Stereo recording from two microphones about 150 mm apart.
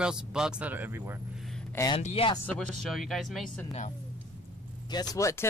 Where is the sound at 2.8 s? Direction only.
Centre (ahead or behind).